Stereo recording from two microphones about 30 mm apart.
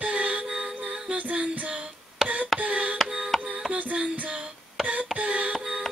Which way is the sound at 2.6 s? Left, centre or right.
Right.